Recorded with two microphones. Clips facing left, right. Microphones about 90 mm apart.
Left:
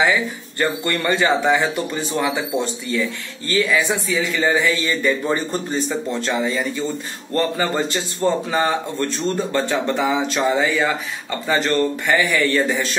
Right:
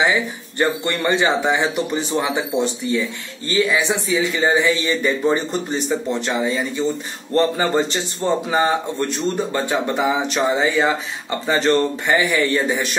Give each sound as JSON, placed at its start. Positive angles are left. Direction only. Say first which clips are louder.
{"t": 0.0, "sound": "a man's voice", "louder": "even", "side_deg": -20}